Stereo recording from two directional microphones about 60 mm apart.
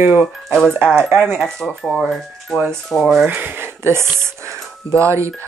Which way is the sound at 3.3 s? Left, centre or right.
Right.